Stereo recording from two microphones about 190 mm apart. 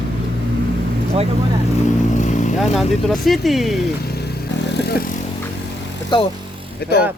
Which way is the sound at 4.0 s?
55° left (ahead or behind).